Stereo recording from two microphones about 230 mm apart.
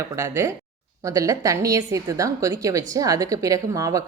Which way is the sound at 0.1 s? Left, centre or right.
Centre.